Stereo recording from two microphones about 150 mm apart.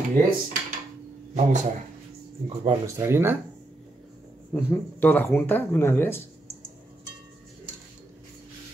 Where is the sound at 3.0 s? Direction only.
15° right (ahead or behind).